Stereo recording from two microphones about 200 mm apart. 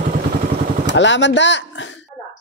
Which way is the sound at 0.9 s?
65° left (ahead or behind).